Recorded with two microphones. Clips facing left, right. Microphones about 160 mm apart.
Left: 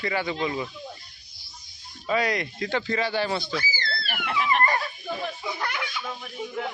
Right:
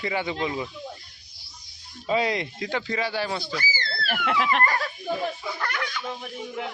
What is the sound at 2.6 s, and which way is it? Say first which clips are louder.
Speech: left 3 dB; 10° right (ahead or behind).